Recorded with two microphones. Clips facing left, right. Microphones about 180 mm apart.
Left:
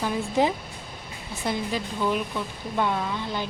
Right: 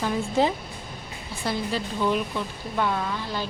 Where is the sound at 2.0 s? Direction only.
5° left (ahead or behind).